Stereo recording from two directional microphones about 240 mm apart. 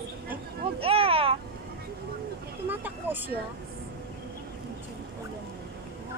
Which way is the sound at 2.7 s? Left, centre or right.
Centre.